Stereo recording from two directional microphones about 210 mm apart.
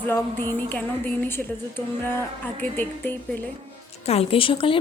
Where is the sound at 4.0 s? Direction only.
30° left (ahead or behind).